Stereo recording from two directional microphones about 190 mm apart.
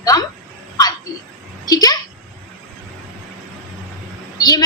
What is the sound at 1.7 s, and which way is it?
Speech, 20° left (ahead or behind).